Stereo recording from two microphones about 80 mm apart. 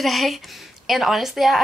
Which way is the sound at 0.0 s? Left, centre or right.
Centre.